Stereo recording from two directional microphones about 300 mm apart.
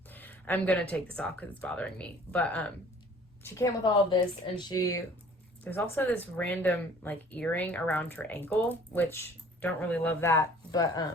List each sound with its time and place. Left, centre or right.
0.1 s speech: centre